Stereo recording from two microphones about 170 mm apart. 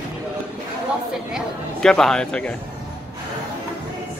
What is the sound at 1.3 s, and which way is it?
Speech, 5° left (ahead or behind).